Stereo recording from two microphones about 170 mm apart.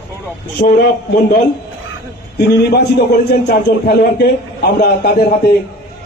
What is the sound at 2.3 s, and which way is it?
A man's voice, 75° left (ahead or behind).